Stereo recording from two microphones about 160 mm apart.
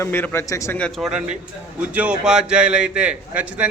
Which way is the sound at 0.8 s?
Centre (ahead or behind).